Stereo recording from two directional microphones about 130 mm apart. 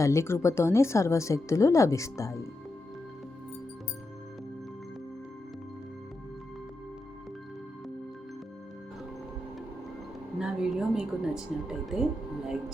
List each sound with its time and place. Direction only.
0.0 s speech: 20° left (ahead or behind)
10.3 s speech: 5° right (ahead or behind)